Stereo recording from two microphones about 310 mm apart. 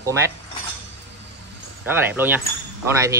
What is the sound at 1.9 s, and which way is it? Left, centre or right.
Speech, centre.